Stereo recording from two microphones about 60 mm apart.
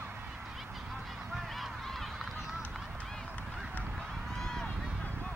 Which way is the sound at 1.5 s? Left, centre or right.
Centre.